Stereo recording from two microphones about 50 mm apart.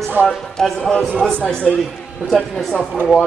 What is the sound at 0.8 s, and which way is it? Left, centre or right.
Speech, centre.